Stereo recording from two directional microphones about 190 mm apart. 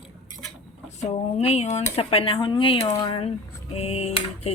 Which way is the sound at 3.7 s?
35° left (ahead or behind).